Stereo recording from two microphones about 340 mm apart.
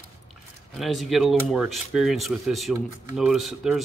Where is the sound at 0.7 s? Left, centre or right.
Centre.